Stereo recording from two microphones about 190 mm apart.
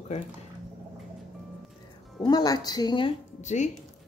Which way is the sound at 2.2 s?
20° left (ahead or behind).